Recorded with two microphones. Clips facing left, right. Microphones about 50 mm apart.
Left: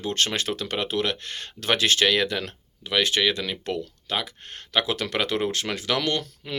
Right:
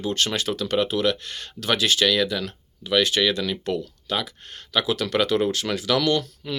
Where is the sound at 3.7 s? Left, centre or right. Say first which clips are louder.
Right 2 dB; left.